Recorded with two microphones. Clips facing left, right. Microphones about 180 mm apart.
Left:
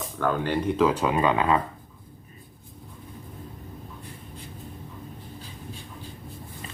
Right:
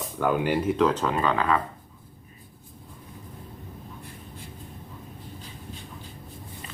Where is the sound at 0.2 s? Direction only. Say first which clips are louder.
Right 1 dB; 10° right (ahead or behind); by 1.6 s 20° left (ahead or behind).